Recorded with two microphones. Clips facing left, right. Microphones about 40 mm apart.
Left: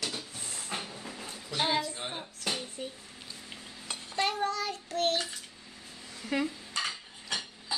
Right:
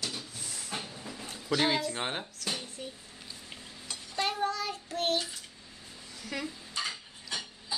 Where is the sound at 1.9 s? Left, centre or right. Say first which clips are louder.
Right 4 dB; right.